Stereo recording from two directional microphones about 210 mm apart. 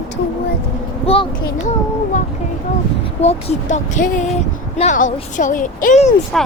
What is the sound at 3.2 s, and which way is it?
Speech, 35° left (ahead or behind).